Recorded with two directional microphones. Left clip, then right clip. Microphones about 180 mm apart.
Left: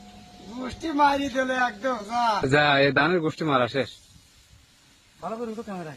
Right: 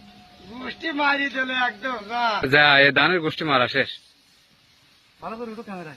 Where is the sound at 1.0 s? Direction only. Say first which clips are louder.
Left 1 dB; 90° left.